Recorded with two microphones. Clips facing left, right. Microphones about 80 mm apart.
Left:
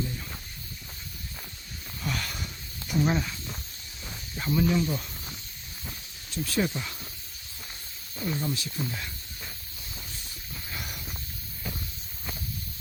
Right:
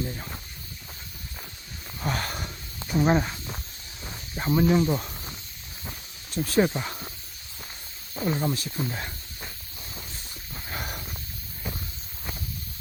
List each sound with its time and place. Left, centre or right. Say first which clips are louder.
2.0 s a sound: right 4 dB; right
4.4 s snake: right 4 dB; right
4.7 s speech: right 5 dB; right
6.3 s speech: right 5 dB; right
8.1 s speech: right 4 dB; right
8.9 s snake: right 3 dB; right
10.5 s a sound: right 4 dB; right